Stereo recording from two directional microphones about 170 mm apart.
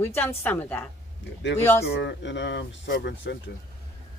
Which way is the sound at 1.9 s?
90° left.